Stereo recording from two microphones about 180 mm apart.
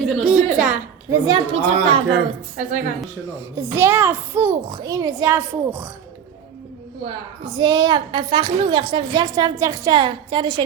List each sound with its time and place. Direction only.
0.0 s a sound: centre (ahead or behind)
1.1 s a woman's voice: 20° right (ahead or behind)
1.8 s speech: 30° right (ahead or behind)
2.6 s a woman's voice: 45° right (ahead or behind)
3.2 s a child's voice: 15° right (ahead or behind)
7.0 s a woman's voice: 25° right (ahead or behind)